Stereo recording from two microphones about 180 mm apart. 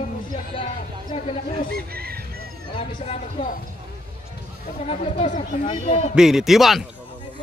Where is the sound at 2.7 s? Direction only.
35° left (ahead or behind).